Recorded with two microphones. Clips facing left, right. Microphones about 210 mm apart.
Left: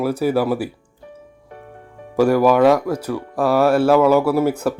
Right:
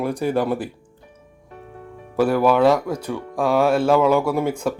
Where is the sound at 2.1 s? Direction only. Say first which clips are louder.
Left 3 dB; 10° left (ahead or behind).